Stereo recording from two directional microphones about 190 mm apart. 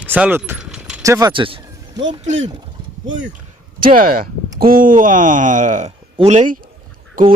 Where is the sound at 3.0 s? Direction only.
80° right.